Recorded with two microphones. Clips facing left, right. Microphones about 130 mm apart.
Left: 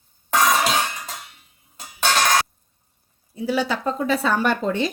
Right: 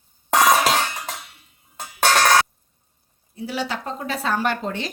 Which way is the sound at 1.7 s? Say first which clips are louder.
Right 3 dB; 60° right (ahead or behind).